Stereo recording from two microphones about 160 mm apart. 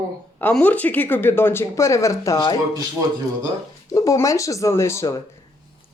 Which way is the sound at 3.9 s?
20° left (ahead or behind).